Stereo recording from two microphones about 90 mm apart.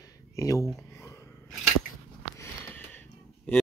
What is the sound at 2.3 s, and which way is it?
Sniff, 20° left (ahead or behind).